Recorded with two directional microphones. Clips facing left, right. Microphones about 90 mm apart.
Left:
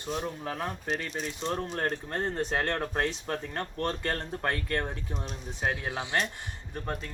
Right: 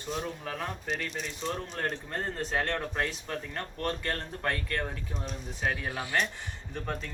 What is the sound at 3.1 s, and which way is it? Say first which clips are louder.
Speech: left 3 dB; 40° left (ahead or behind).